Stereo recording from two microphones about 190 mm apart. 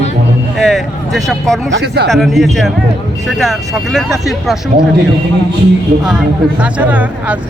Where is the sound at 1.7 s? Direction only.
65° right (ahead or behind).